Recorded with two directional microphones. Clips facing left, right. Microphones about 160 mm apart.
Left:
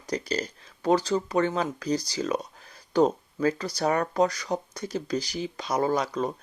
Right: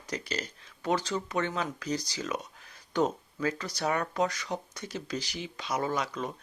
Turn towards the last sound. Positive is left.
turn(degrees=35)  # may be behind; listen again after turning